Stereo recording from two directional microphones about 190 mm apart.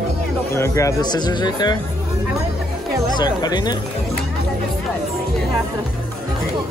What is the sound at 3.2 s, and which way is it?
Speech, 20° left (ahead or behind).